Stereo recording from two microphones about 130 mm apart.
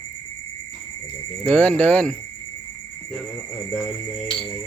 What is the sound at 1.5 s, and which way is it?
Cricket, 10° left (ahead or behind).